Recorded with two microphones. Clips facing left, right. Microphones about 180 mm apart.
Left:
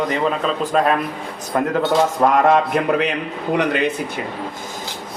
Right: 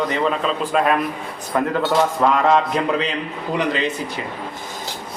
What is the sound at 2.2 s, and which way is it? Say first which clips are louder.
A man's voice: left 3 dB; 50° left (ahead or behind).